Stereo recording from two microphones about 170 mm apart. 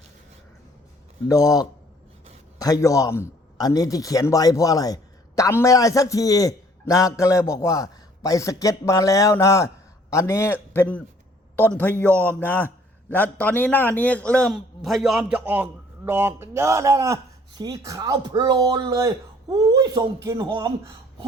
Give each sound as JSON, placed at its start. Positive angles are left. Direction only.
{"t": 1.3, "sound": "a man's voice", "side_deg": 20}